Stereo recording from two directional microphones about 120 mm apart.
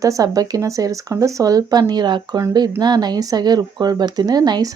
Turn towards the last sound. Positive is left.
turn(degrees=-35)  # may be behind; listen again after turning